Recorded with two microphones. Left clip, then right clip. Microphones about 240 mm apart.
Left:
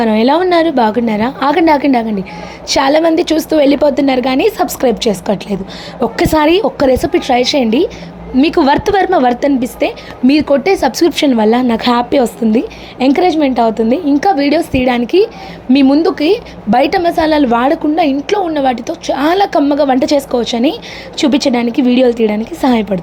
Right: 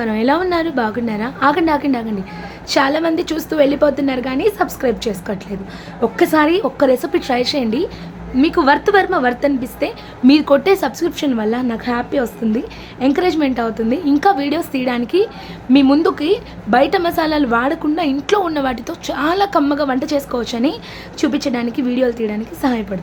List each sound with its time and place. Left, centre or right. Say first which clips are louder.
0.0 s a woman's voice: left 6 dB; centre
13.2 s a woman's voice: left 6 dB; centre
16.0 s a woman's voice: left 4 dB; centre
17.0 s a woman's voice: left 6 dB; centre
18.2 s a woman's voice: left 3 dB; centre; by 23.0 s left